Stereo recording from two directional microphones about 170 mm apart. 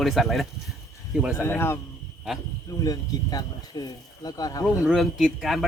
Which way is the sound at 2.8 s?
20° left (ahead or behind).